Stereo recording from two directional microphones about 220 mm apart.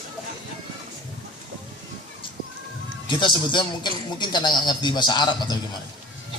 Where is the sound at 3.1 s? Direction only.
20° left (ahead or behind).